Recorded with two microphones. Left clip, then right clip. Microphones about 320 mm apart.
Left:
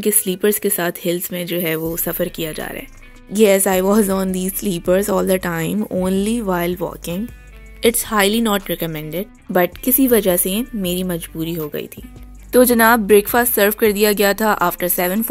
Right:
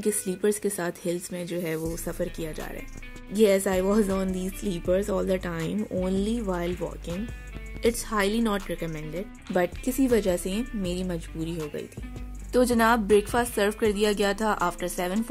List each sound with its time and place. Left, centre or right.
0.0 s speech: centre